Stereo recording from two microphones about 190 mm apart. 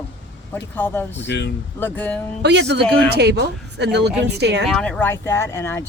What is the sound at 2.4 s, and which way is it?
Speech, 65° right (ahead or behind).